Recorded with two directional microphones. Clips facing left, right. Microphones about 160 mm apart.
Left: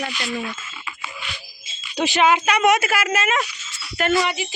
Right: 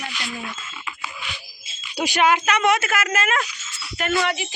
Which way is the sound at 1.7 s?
10° right (ahead or behind).